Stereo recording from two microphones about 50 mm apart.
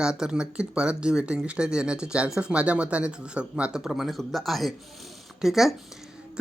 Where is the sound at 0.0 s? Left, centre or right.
Centre.